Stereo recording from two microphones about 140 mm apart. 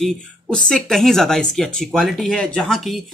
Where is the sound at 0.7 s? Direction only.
5° left (ahead or behind).